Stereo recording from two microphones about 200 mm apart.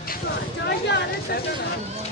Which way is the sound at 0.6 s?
60° left (ahead or behind).